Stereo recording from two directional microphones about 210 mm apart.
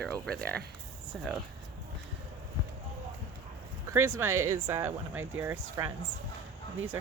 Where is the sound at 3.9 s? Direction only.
15° right (ahead or behind).